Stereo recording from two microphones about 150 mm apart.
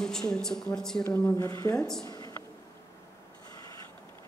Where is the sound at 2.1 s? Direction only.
25° left (ahead or behind).